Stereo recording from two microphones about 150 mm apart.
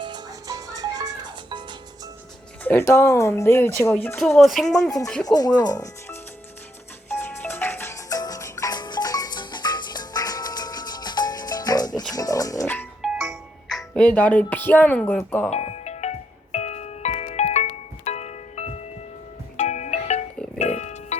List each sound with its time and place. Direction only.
0.0 s music: 25° right (ahead or behind)
2.6 s speech: 15° left (ahead or behind)
4.2 s speech: centre (ahead or behind)
5.2 s speech: 25° left (ahead or behind)
7.1 s music: 15° left (ahead or behind)
13.0 s music: centre (ahead or behind)
15.4 s music: 45° left (ahead or behind)